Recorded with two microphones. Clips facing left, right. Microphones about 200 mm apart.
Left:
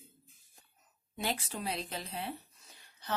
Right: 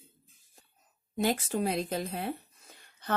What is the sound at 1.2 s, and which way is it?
Speech, 45° right (ahead or behind).